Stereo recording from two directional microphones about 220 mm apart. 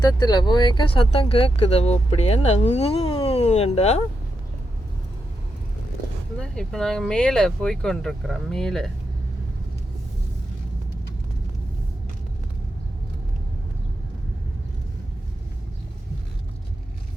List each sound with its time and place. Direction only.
0.0 s speech: 20° left (ahead or behind)
6.4 s speech: 5° left (ahead or behind)